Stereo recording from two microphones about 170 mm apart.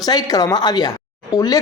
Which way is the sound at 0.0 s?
20° left (ahead or behind).